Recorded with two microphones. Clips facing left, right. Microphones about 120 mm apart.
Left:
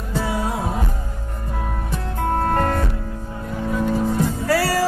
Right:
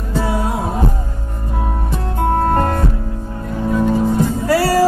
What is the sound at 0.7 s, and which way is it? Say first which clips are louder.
Music: right 6 dB; 30° right (ahead or behind).